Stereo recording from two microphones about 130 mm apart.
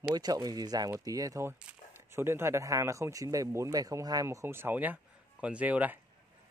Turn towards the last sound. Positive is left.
turn(degrees=-10)  # may be behind; listen again after turning